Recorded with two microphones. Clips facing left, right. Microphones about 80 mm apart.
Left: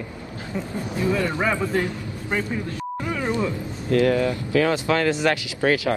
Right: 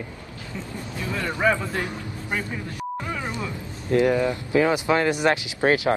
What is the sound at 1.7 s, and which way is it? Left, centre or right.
Speech, centre.